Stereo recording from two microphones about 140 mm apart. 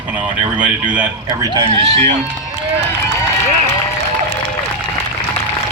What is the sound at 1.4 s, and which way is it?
Speech, 30° right (ahead or behind).